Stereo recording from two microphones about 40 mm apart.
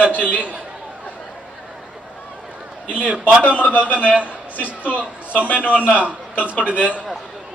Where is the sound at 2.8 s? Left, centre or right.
Right.